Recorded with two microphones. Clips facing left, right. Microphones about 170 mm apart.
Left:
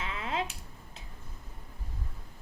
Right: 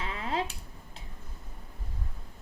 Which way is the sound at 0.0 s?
35° right (ahead or behind).